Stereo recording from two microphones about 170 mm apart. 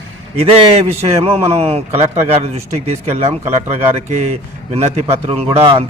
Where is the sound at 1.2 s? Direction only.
35° right (ahead or behind).